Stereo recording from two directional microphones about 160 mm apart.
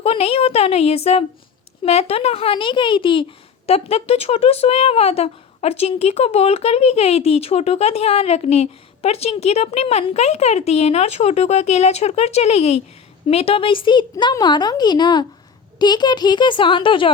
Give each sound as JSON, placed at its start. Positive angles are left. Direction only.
{"t": 0.0, "sound": "speech", "side_deg": 40}